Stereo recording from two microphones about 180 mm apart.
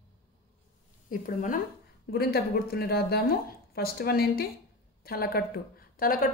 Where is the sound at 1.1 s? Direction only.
50° left (ahead or behind).